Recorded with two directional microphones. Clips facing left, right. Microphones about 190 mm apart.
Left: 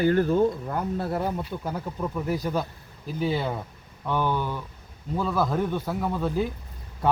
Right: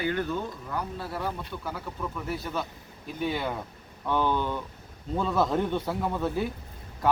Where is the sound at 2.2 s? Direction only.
40° left (ahead or behind).